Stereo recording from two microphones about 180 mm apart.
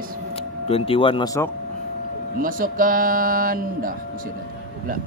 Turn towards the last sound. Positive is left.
turn(degrees=-50)  # may be behind; listen again after turning